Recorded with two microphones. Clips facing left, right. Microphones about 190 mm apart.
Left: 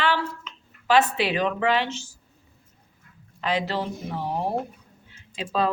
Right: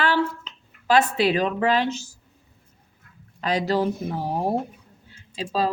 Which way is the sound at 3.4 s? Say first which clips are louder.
Right 3 dB; 40° right (ahead or behind).